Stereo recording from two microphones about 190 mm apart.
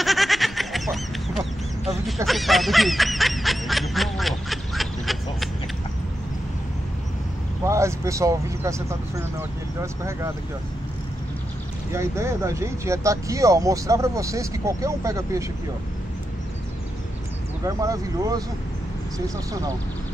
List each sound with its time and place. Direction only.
0.0 s goat: centre (ahead or behind)
2.2 s snicker: centre (ahead or behind)
7.6 s speech: 15° right (ahead or behind)
11.9 s speech: 15° right (ahead or behind)
17.6 s speech: 15° right (ahead or behind)